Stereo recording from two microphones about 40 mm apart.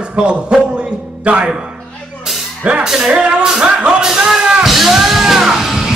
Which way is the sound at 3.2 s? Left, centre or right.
Right.